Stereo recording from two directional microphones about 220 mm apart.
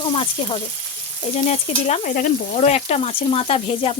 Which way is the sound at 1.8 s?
35° left (ahead or behind).